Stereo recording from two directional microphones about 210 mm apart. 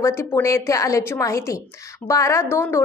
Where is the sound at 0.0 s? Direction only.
15° left (ahead or behind).